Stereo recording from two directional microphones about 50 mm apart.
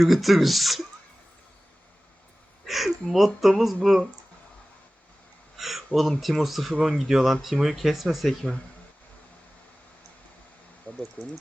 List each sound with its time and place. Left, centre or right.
0.0 s speech: centre
2.6 s speech: centre
5.5 s speech: centre
8.3 s speech: centre
10.9 s speech: left